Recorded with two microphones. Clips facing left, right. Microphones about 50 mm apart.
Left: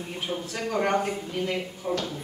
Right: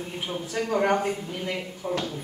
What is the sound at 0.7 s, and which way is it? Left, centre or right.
Speech, centre.